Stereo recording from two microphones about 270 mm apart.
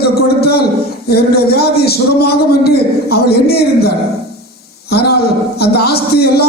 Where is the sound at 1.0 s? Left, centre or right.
Left.